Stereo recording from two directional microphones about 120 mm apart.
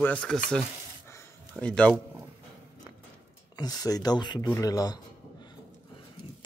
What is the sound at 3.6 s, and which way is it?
Speech, 30° left (ahead or behind).